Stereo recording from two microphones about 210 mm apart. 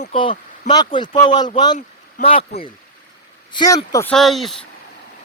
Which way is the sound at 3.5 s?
15° left (ahead or behind).